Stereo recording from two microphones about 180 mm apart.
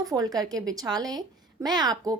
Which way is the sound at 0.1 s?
20° right (ahead or behind).